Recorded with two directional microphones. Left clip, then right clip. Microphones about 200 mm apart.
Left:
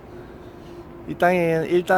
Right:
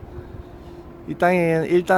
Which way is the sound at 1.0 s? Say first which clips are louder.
Right 1 dB; 15° right (ahead or behind).